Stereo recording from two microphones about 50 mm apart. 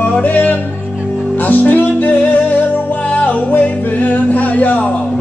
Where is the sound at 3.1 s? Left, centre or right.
Left.